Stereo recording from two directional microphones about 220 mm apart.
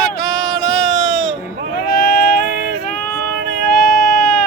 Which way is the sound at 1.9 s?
40° left (ahead or behind).